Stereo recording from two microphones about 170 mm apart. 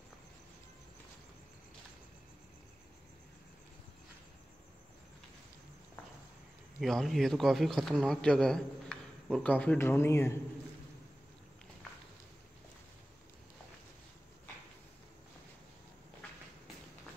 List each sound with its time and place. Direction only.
6.8 s speech: centre (ahead or behind)